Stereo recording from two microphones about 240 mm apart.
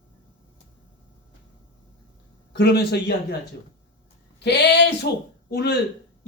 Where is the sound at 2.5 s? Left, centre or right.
Left.